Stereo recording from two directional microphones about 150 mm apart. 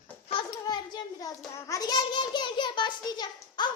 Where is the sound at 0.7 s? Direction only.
30° left (ahead or behind).